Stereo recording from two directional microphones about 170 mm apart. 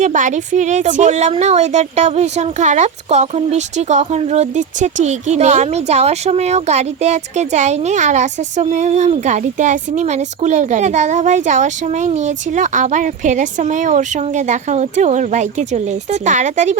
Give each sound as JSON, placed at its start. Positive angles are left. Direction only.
{"t": 0.0, "sound": "a woman's voice", "side_deg": -45}